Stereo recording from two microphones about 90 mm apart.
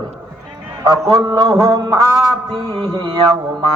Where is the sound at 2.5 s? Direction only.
55° right (ahead or behind).